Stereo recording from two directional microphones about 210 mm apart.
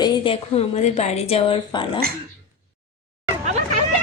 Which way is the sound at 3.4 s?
35° right (ahead or behind).